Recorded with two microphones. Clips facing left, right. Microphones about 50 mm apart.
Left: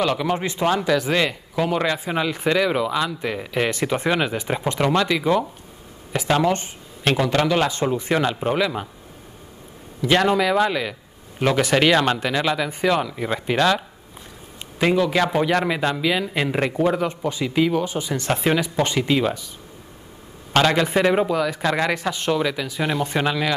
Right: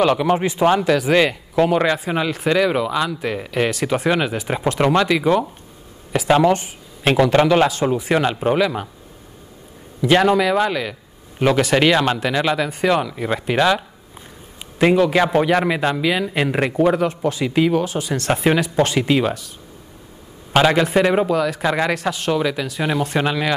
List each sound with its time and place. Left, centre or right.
0.0 s speech: centre
6.6 s a sound: centre
7.5 s speech: centre
10.0 s speech: centre
17.0 s speech: centre
17.8 s speech: centre
18.3 s speech: centre
18.6 s speech: centre
18.9 s speech: centre
20.5 s speech: centre
21.5 s speech: centre